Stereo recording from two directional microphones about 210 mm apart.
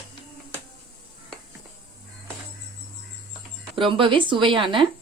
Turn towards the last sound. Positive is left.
turn(degrees=-25)  # may be behind; listen again after turning